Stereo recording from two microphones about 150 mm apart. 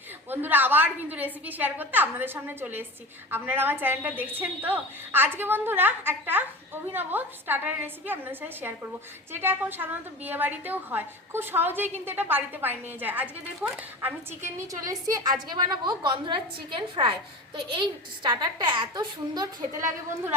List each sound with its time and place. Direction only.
0.3 s a woman's voice: 10° right (ahead or behind)